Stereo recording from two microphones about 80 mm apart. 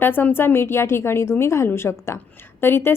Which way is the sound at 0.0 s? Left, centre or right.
Left.